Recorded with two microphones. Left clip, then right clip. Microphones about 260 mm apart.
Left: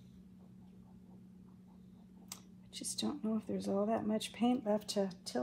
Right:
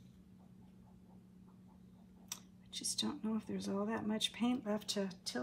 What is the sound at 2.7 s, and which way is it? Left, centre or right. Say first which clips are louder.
Speech: right 1 dB; centre.